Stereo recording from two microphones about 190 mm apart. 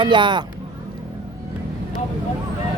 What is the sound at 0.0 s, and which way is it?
Speech, 25° right (ahead or behind).